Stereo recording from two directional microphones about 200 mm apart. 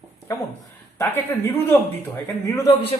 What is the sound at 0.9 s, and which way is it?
Speech, 10° left (ahead or behind).